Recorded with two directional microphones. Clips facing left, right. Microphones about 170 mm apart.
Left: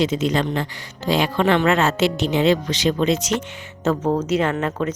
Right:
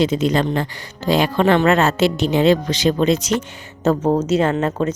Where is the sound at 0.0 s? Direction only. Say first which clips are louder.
Right 3 dB; 35° right (ahead or behind).